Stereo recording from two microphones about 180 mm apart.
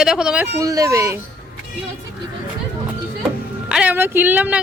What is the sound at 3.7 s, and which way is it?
Speech, 10° right (ahead or behind).